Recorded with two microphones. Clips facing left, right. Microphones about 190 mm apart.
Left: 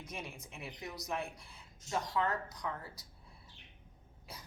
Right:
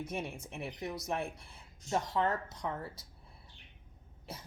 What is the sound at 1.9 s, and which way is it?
A woman's voice, 25° right (ahead or behind).